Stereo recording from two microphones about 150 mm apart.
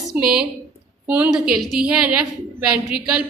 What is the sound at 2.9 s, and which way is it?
Speech, 5° right (ahead or behind).